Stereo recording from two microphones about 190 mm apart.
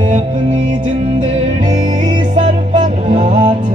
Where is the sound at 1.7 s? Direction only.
40° right (ahead or behind).